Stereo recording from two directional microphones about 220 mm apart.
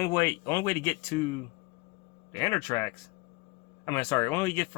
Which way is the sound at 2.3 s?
10° left (ahead or behind).